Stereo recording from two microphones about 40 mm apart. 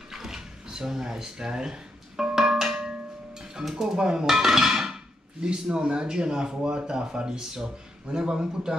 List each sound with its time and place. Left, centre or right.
0.1 s a sound: centre
3.7 s dishes: centre
5.4 s speech: right